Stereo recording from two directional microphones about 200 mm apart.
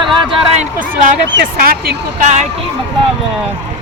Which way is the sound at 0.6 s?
40° right (ahead or behind).